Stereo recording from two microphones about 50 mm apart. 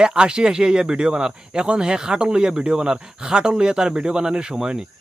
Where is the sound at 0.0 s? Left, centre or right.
Centre.